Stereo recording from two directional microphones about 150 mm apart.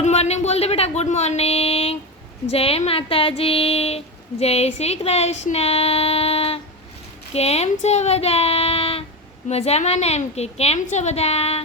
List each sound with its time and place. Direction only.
0.0 s a woman's voice: 45° left (ahead or behind)